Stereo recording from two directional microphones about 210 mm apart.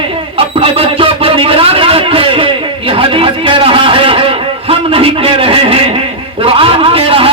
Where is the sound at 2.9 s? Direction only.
25° right (ahead or behind).